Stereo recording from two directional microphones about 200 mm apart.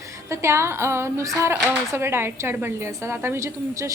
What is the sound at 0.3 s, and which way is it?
A child's voice, 15° right (ahead or behind).